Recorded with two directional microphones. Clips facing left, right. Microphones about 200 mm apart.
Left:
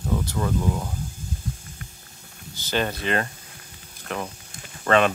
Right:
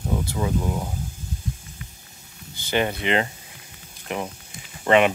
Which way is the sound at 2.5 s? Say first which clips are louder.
Right 2 dB; 15° right (ahead or behind).